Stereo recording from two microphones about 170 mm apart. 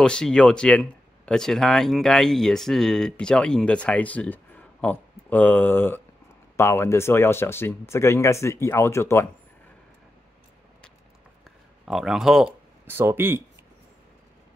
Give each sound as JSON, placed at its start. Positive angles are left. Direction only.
{"t": 0.0, "sound": "speech", "side_deg": 5}
{"t": 11.8, "sound": "speech", "side_deg": 0}
{"t": 12.9, "sound": "speech", "side_deg": -15}